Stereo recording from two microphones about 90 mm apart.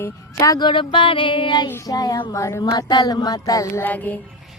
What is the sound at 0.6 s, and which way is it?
Music, 65° left (ahead or behind).